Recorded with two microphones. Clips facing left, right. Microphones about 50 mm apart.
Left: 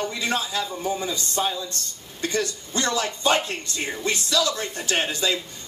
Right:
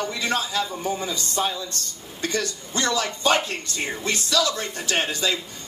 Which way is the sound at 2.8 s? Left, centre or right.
Left.